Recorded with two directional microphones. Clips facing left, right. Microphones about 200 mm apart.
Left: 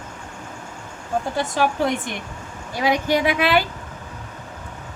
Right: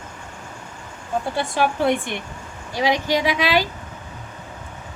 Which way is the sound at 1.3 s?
40° left (ahead or behind).